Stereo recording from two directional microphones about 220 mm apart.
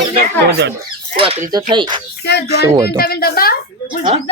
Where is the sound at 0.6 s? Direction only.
50° right (ahead or behind).